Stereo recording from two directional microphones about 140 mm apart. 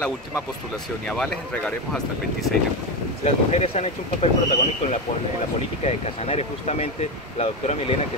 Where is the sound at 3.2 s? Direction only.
55° left (ahead or behind).